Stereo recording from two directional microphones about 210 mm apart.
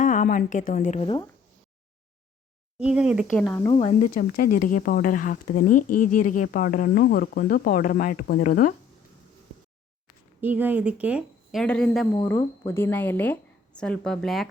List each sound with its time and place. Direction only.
0.0 s a woman's voice: 40° left (ahead or behind)
2.7 s speech: 5° right (ahead or behind)
3.7 s speech: 25° left (ahead or behind)
4.1 s speech: 45° left (ahead or behind)
10.4 s speech: 10° right (ahead or behind)
11.6 s speech: 5° left (ahead or behind)
12.1 s a woman's voice: 15° left (ahead or behind)